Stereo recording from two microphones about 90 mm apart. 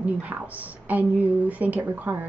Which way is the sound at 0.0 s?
15° right (ahead or behind).